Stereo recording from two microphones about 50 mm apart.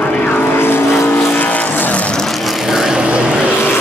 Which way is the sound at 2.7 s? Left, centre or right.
Centre.